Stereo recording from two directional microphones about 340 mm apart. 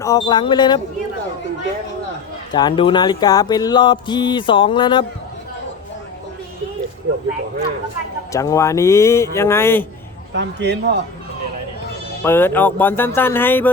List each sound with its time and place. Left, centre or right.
0.0 s music: centre
2.5 s music: centre
8.3 s music: centre
10.3 s a man's voice: right
12.2 s music: centre